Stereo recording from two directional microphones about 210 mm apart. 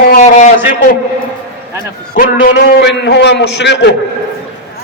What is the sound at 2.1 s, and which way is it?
A man's voice, 45° left (ahead or behind).